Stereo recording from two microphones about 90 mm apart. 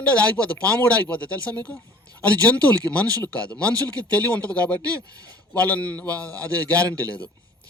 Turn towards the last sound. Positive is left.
turn(degrees=15)  # may be behind; listen again after turning